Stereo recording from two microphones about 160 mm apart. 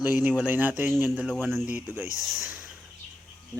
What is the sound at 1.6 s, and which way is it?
Speech, 10° right (ahead or behind).